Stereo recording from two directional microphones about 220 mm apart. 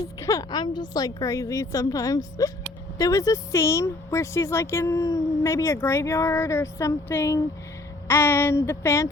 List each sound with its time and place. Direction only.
0.0 s speech: 15° left (ahead or behind)